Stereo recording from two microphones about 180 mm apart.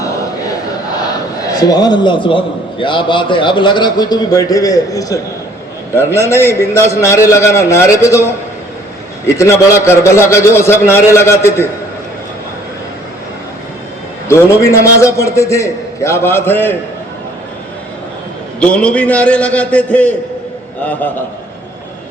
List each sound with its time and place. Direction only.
1.5 s a man's voice: 20° left (ahead or behind)
6.2 s a man's voice: 15° left (ahead or behind)
14.3 s a man's voice: 15° left (ahead or behind)
18.6 s a man's voice: 5° left (ahead or behind)